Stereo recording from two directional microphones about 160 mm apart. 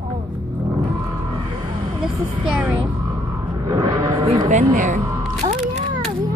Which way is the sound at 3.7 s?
20° right (ahead or behind).